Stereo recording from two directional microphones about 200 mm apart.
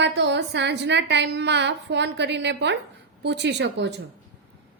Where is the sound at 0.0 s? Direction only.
60° right (ahead or behind).